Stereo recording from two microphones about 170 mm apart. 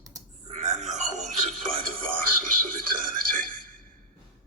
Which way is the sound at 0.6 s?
45° right (ahead or behind).